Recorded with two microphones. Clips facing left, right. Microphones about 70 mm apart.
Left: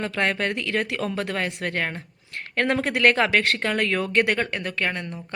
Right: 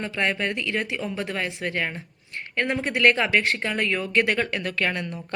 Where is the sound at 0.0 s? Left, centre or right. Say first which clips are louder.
Left 1 dB; left.